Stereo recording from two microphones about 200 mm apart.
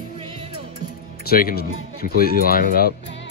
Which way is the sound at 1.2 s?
50° left (ahead or behind).